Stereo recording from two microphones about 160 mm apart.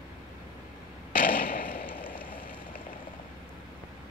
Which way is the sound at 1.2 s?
65° left (ahead or behind).